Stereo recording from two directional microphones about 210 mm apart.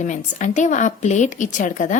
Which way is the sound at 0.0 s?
35° left (ahead or behind).